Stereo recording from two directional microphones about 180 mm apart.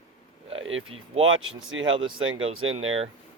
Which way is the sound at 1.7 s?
90° right.